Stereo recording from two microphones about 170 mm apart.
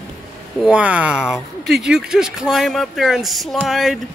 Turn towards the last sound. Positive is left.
turn(degrees=0)  # may be behind; listen again after turning